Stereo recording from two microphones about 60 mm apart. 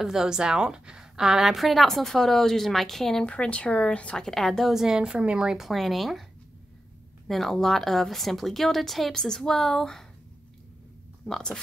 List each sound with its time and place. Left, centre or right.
0.0 s a woman's voice: centre
3.3 s speech: centre
4.2 s a woman's voice: centre
4.7 s a woman's voice: centre
5.6 s a woman's voice: centre
7.2 s a woman's voice: centre